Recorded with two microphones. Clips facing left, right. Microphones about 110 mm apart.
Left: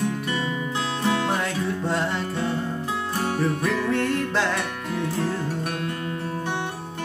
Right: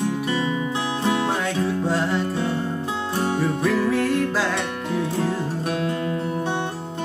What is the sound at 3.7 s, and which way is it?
Music, 5° right (ahead or behind).